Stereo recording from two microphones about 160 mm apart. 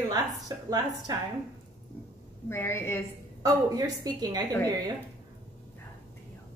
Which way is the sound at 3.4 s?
25° right (ahead or behind).